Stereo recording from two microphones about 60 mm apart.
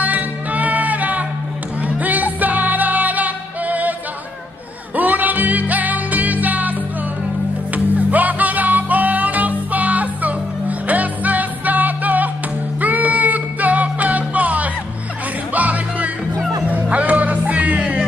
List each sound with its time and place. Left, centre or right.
0.0 s music: right
4.9 s music: right
7.7 s music: right